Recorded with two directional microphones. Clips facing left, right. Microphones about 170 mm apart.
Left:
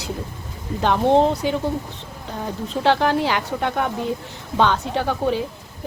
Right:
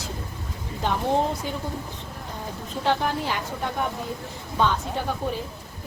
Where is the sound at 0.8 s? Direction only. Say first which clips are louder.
Left 7 dB; 90° left.